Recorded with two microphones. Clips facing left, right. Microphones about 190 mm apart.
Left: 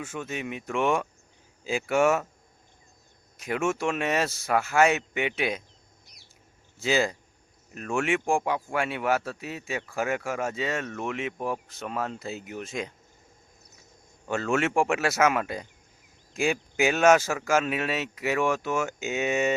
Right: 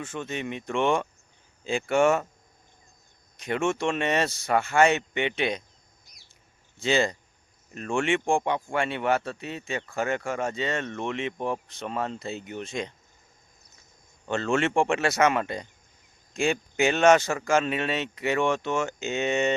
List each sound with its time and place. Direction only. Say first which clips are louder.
0.0 s speech: right 1 dB; 5° left (ahead or behind)
3.3 s speech: right 1 dB; 5° left (ahead or behind)
6.1 s a sound: left 2 dB; 65° left (ahead or behind)
6.7 s speech: right 1 dB; 5° left (ahead or behind)
14.3 s speech: right 1 dB; 5° left (ahead or behind)